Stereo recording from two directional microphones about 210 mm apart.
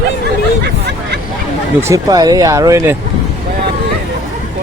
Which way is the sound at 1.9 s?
15° right (ahead or behind).